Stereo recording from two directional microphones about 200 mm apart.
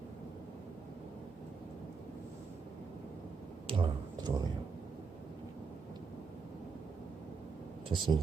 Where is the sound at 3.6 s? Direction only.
25° right (ahead or behind).